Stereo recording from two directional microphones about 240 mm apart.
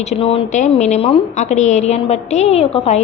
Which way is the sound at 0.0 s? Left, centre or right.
Left.